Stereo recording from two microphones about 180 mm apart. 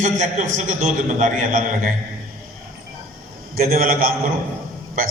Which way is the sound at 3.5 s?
55° right (ahead or behind).